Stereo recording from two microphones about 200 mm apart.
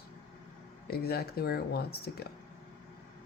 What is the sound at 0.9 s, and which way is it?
Speech, 50° left (ahead or behind).